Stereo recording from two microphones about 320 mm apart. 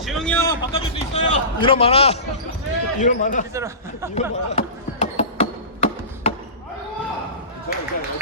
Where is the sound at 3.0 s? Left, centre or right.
Left.